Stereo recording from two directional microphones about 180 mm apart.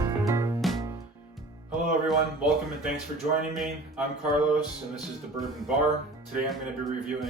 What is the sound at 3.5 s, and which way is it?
Speech, centre (ahead or behind).